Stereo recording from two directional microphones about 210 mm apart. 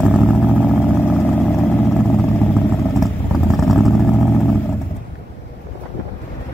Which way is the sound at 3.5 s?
Centre (ahead or behind).